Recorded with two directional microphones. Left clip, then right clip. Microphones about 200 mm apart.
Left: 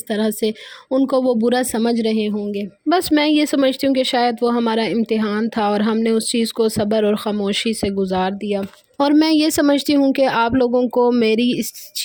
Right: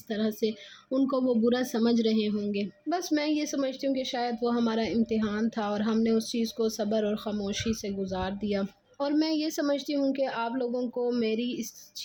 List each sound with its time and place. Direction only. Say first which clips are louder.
0.1 s speech: left 10 dB; 50° left (ahead or behind); by 2.6 s 35° left (ahead or behind)
2.9 s speech: left 13 dB; 50° left (ahead or behind)
9.0 s speech: left 13 dB; 55° left (ahead or behind)